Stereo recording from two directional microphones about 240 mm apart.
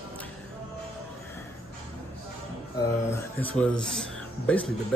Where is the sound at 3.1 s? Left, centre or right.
Centre.